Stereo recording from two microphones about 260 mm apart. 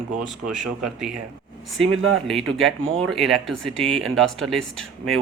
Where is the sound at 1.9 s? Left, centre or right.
Right.